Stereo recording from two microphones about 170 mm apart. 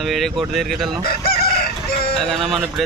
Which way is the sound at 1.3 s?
65° left (ahead or behind).